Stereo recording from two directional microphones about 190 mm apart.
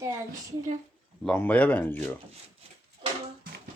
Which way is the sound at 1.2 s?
10° left (ahead or behind).